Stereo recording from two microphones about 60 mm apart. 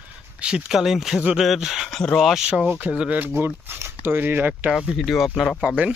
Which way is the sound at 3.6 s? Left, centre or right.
Right.